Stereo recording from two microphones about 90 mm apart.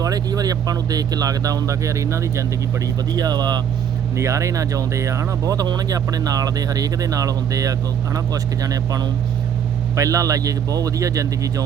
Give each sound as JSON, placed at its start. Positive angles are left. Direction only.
{"t": 0.0, "sound": "speech", "side_deg": -45}
{"t": 2.8, "sound": "speech", "side_deg": -45}
{"t": 4.2, "sound": "speech", "side_deg": -35}